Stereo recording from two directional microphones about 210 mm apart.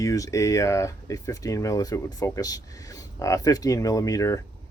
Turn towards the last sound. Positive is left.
turn(degrees=15)  # may be behind; listen again after turning